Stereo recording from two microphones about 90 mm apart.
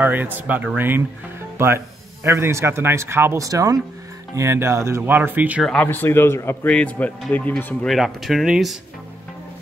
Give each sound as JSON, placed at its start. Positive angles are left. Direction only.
{"t": 0.0, "sound": "speech", "side_deg": -20}
{"t": 2.2, "sound": "speech", "side_deg": -30}
{"t": 3.4, "sound": "speech", "side_deg": -40}
{"t": 5.0, "sound": "speech", "side_deg": -20}
{"t": 5.8, "sound": "a man's voice", "side_deg": 20}
{"t": 6.7, "sound": "speech", "side_deg": 15}
{"t": 7.8, "sound": "speech", "side_deg": 0}